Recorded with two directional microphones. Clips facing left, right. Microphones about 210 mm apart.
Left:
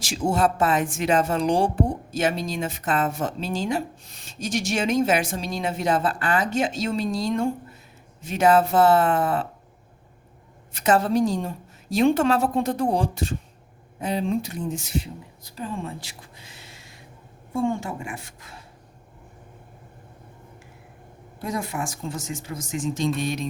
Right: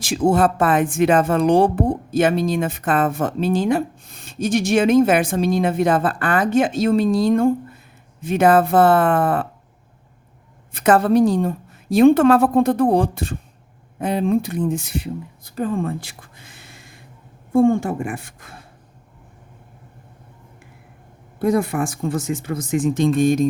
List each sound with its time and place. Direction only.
0.0 s speech: 55° right (ahead or behind)
10.7 s a woman's voice: 55° right (ahead or behind)
21.3 s speech: 60° right (ahead or behind)